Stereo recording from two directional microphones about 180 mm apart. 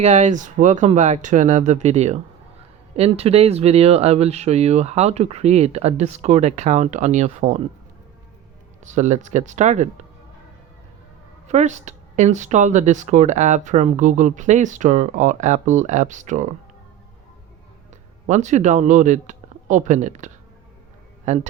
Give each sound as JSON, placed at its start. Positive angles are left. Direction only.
{"t": 0.0, "sound": "speech", "side_deg": -40}
{"t": 8.8, "sound": "speech", "side_deg": -40}
{"t": 11.4, "sound": "speech", "side_deg": -40}
{"t": 18.3, "sound": "speech", "side_deg": -40}